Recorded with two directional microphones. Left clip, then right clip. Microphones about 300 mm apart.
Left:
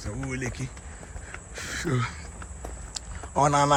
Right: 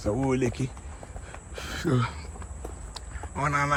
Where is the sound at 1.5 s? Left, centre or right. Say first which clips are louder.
Right 1 dB; centre.